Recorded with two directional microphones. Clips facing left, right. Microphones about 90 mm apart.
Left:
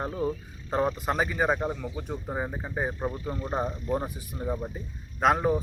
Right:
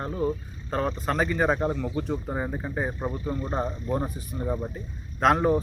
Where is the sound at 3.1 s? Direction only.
25° right (ahead or behind).